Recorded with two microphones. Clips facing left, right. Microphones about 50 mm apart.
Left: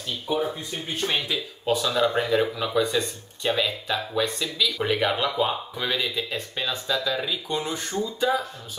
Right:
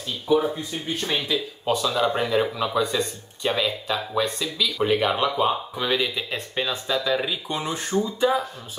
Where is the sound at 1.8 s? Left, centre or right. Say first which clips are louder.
Even; centre.